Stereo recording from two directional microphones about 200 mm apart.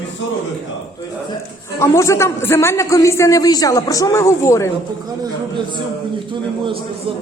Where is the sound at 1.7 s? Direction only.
15° left (ahead or behind).